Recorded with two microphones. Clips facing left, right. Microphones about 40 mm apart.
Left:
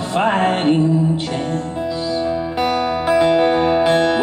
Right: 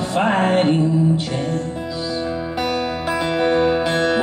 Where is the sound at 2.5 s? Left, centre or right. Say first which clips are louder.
Left 4 dB; left.